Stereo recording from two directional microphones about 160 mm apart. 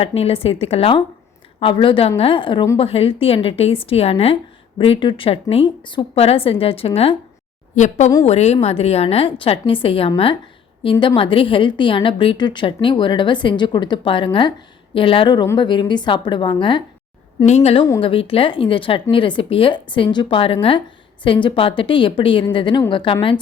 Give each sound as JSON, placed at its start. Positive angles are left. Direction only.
{"t": 0.0, "sound": "a woman's voice", "side_deg": 40}
{"t": 11.2, "sound": "a woman's voice", "side_deg": 35}
{"t": 17.4, "sound": "a woman's voice", "side_deg": 40}